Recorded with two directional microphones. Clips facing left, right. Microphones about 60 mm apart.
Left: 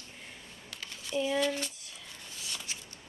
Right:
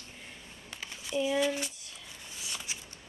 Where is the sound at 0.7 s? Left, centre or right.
Centre.